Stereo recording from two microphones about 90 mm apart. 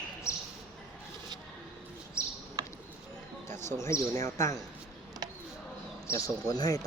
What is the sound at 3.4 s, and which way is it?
Speech, 30° left (ahead or behind).